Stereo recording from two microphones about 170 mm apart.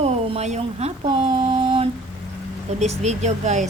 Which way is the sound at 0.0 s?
40° right (ahead or behind).